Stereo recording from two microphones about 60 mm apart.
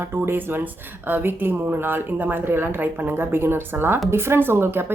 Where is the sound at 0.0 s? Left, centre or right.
Right.